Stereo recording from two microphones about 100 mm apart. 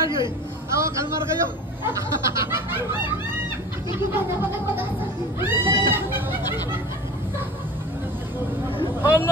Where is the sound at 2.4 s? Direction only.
25° right (ahead or behind).